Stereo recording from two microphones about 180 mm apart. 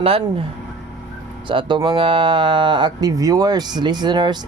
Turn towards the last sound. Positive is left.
turn(degrees=-25)  # may be behind; listen again after turning